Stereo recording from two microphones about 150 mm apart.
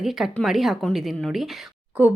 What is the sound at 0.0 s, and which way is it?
Speech, centre (ahead or behind).